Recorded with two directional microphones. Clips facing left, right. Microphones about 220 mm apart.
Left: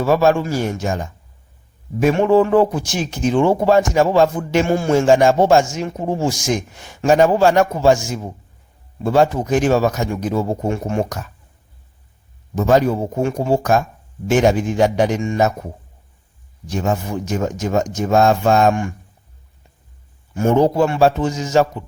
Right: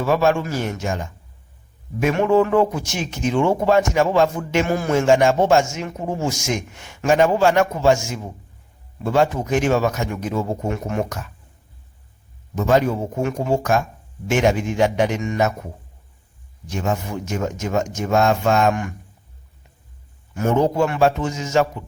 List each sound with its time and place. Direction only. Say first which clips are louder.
0.0 s speech: left 3 dB; 35° left (ahead or behind)
12.5 s speech: left 3 dB; 35° left (ahead or behind)
16.6 s speech: left 3 dB; 35° left (ahead or behind)
20.3 s speech: left 4 dB; 30° left (ahead or behind)